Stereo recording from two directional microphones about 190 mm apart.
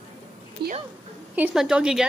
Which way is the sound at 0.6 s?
55° right (ahead or behind).